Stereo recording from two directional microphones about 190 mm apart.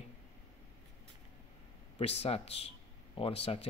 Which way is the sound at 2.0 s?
30° left (ahead or behind).